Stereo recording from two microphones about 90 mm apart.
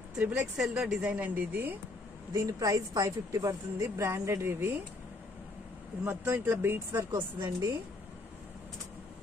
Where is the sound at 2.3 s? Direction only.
40° right (ahead or behind).